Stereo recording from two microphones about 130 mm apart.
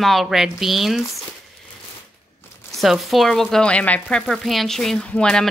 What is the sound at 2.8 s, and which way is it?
Speech, centre (ahead or behind).